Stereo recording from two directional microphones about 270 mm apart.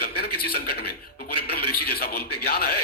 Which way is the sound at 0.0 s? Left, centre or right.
Left.